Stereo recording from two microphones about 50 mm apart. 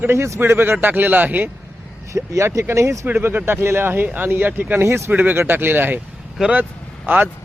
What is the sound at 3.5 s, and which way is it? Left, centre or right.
Speech, right.